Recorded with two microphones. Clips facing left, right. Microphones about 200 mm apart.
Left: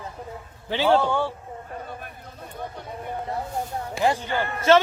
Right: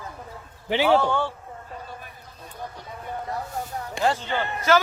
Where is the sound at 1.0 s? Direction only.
15° left (ahead or behind).